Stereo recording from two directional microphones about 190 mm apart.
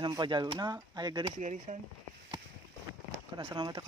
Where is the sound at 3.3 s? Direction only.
25° right (ahead or behind).